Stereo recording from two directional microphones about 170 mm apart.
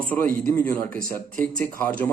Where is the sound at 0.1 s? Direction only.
10° left (ahead or behind).